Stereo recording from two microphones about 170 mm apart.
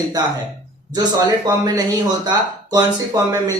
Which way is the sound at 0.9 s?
25° right (ahead or behind).